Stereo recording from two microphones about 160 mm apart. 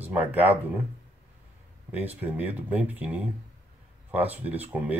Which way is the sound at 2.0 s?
10° right (ahead or behind).